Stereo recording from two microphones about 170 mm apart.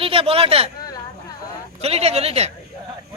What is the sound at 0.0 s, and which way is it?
Speech, 35° right (ahead or behind).